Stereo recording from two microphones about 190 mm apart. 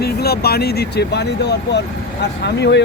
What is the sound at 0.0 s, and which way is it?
Speech, 55° left (ahead or behind).